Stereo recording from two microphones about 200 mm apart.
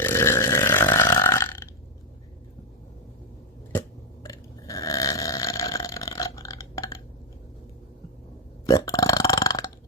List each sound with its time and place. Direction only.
0.0 s burping: 15° left (ahead or behind)
3.7 s burping: 15° left (ahead or behind)
8.6 s burping: 15° left (ahead or behind)